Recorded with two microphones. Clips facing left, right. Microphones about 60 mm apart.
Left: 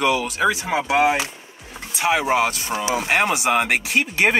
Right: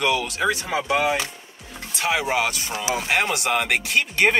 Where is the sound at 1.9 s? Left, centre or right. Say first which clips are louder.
Left 3 dB; centre.